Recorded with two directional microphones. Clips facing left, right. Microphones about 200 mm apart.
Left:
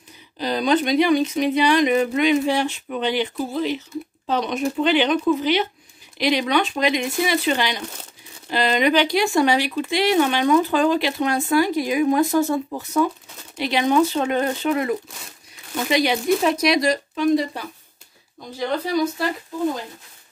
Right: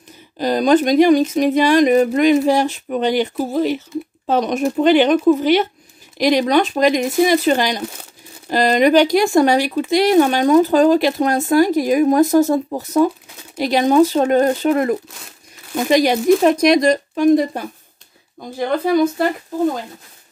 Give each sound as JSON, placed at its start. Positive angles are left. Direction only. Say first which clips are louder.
{"t": 0.4, "sound": "speech", "louder": "right 6 dB", "side_deg": -45}